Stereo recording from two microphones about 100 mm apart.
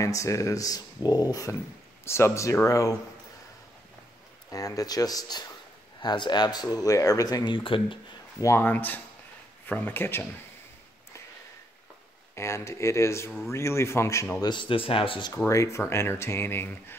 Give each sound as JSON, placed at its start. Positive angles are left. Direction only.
{"t": 0.0, "sound": "speech", "side_deg": 35}
{"t": 4.5, "sound": "speech", "side_deg": 35}
{"t": 8.4, "sound": "speech", "side_deg": 30}
{"t": 8.6, "sound": "speech", "side_deg": 20}
{"t": 12.4, "sound": "speech", "side_deg": 30}
{"t": 14.4, "sound": "speech", "side_deg": 50}
{"t": 15.3, "sound": "speech", "side_deg": 30}